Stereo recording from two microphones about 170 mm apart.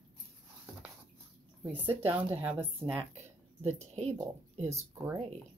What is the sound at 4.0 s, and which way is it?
Speech, 40° right (ahead or behind).